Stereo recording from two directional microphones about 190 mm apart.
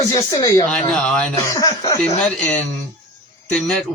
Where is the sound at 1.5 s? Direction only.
15° left (ahead or behind).